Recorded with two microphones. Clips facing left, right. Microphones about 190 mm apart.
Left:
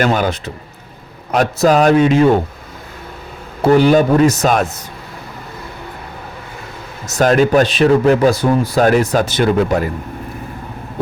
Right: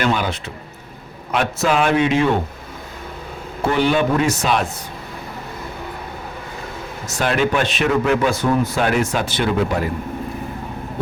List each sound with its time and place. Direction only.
0.0 s speech: 45° left (ahead or behind)
3.6 s speech: 40° left (ahead or behind)
7.1 s speech: 40° left (ahead or behind)